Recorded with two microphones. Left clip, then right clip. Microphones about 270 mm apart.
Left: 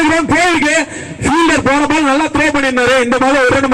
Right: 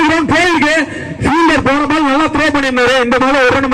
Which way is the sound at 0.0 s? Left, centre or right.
Centre.